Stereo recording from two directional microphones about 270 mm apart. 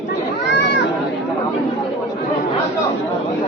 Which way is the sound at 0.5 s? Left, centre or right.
Left.